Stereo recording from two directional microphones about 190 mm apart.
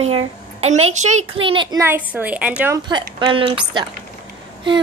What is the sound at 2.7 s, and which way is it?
Speech, 20° right (ahead or behind).